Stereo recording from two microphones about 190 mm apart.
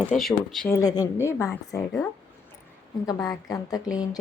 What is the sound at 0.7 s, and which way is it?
A woman's voice, 20° left (ahead or behind).